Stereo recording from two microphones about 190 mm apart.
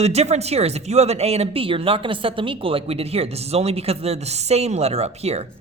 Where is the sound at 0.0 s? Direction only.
35° right (ahead or behind).